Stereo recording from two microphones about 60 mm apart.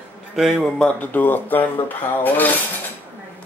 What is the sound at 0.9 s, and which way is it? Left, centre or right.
Speech, left.